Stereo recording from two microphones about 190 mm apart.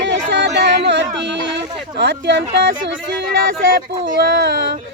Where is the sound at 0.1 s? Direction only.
65° right (ahead or behind).